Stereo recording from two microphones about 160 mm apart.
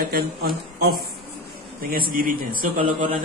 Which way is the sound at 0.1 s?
70° right (ahead or behind).